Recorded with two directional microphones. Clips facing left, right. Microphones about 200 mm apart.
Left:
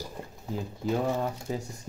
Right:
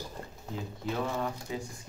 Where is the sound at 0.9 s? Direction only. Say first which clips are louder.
Left 4 dB; 40° left (ahead or behind).